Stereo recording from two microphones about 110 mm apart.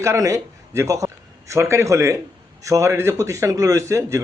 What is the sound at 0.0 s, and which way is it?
A man's voice, 25° right (ahead or behind).